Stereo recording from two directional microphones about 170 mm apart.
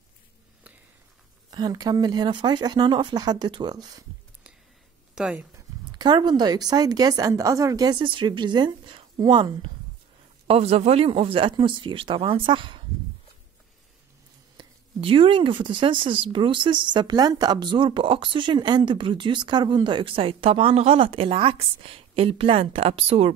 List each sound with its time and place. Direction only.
1.5 s speech: 25° right (ahead or behind)
5.1 s speech: 5° right (ahead or behind)
5.9 s speech: 25° right (ahead or behind)
14.6 s speech: 30° right (ahead or behind)